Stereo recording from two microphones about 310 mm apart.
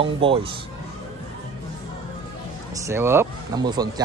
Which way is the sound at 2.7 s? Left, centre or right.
Centre.